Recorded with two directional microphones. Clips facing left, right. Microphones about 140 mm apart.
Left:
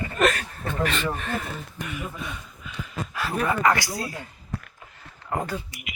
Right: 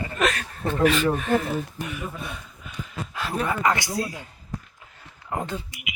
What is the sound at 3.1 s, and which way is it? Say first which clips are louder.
Speech: left 1 dB; 20° right (ahead or behind).